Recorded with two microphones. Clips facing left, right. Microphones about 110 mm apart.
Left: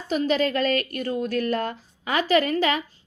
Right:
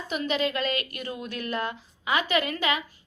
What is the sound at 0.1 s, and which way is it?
A woman's voice, 35° left (ahead or behind).